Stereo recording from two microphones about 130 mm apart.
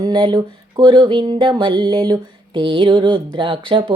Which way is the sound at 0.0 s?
35° right (ahead or behind).